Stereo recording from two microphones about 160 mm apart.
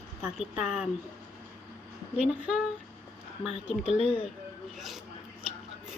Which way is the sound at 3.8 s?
40° left (ahead or behind).